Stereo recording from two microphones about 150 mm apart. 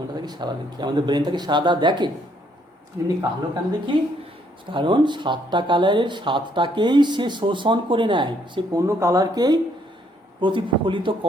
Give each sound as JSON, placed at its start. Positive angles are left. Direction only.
{"t": 0.1, "sound": "speech", "side_deg": -30}
{"t": 3.2, "sound": "speech", "side_deg": -25}
{"t": 8.9, "sound": "speech", "side_deg": -20}